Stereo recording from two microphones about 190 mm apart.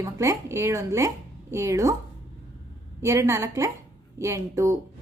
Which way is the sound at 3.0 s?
15° right (ahead or behind).